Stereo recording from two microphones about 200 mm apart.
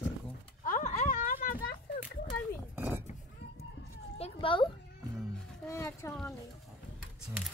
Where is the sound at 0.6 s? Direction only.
40° left (ahead or behind).